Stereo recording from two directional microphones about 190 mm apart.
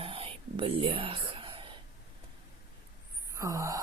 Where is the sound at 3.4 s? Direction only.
15° right (ahead or behind).